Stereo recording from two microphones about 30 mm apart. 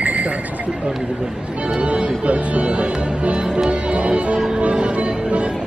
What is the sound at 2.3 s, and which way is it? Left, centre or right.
Music, right.